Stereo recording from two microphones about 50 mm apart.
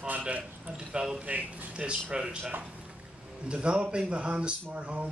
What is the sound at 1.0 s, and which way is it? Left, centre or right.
A man's voice, centre.